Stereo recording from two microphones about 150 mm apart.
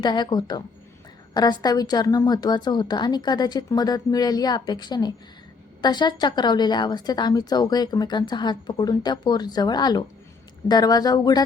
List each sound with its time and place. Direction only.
0.0 s a woman's voice: 30° left (ahead or behind)